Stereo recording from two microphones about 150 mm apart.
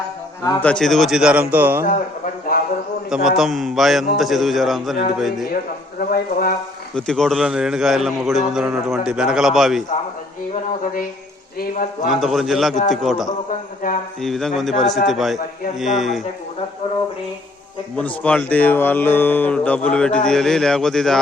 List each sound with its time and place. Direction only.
0.6 s a man's voice: 5° left (ahead or behind); by 1.8 s 15° right (ahead or behind)
1.9 s speech: 60° left (ahead or behind)
3.1 s a man's voice: centre (ahead or behind)
6.0 s speech: 80° left
6.9 s a man's voice: 5° left (ahead or behind)
11.6 s speech: 65° left (ahead or behind)
12.2 s a man's voice: centre (ahead or behind)
17.9 s speech: 10° left (ahead or behind)